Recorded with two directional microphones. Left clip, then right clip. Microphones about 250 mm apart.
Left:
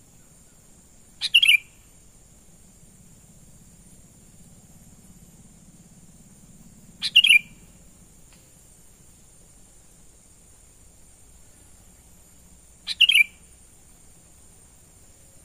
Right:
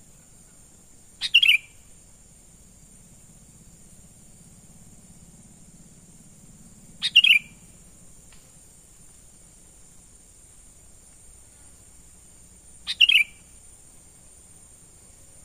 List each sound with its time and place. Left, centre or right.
1.2 s bird: centre
7.0 s bird: centre
12.8 s bird: centre